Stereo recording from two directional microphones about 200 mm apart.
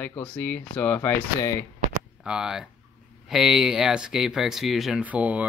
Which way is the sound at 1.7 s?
40° right (ahead or behind).